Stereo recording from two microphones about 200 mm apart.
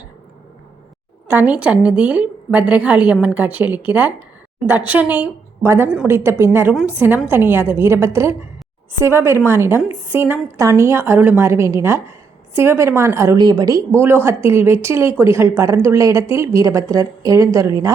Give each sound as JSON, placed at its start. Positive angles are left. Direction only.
{"t": 1.3, "sound": "a woman's voice", "side_deg": -10}